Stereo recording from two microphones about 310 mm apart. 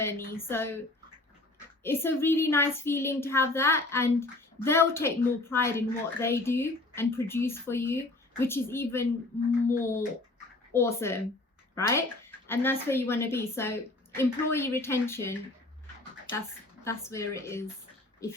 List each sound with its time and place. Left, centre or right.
0.0 s a woman's voice: centre
1.8 s a woman's voice: centre
16.8 s a woman's voice: centre